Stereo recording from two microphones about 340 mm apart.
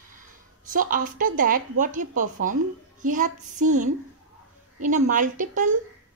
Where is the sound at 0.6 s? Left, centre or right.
Right.